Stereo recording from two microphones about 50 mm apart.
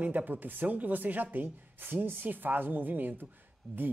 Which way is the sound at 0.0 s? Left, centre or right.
Right.